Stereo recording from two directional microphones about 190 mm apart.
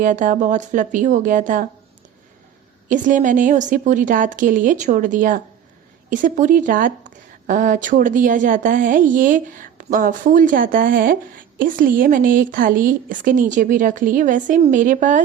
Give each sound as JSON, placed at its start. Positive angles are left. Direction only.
{"t": 0.0, "sound": "a woman's voice", "side_deg": -40}
{"t": 2.9, "sound": "a woman's voice", "side_deg": -40}